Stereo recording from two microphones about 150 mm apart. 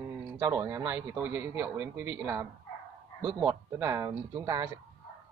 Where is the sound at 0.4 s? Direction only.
20° right (ahead or behind).